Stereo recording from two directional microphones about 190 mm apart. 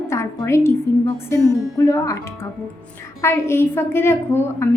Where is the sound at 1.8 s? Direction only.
15° left (ahead or behind).